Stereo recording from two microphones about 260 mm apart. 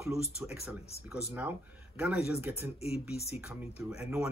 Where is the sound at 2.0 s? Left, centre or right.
Centre.